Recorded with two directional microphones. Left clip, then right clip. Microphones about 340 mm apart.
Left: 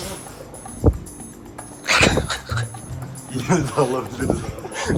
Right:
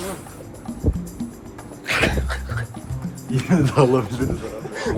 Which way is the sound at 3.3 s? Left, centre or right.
Right.